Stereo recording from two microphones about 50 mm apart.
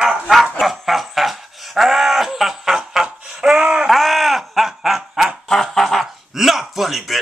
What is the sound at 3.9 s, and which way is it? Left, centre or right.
Snicker, centre.